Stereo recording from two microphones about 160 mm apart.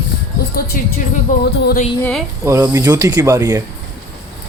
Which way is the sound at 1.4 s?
90° left.